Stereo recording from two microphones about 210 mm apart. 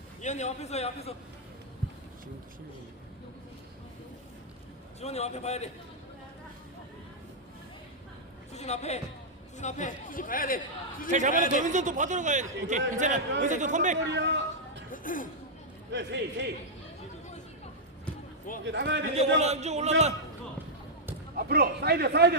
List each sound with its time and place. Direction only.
0.2 s speech: 35° left (ahead or behind)
4.9 s speech: 30° left (ahead or behind)
8.5 s speech: 30° left (ahead or behind)
11.1 s speech: 35° right (ahead or behind)
14.1 s a sound: 60° right (ahead or behind)
14.9 s music: 40° left (ahead or behind)
15.9 s a man's voice: 55° right (ahead or behind)
18.6 s a man's voice: 60° right (ahead or behind)
19.1 s speech: 30° right (ahead or behind)
21.3 s a man's voice: 50° right (ahead or behind)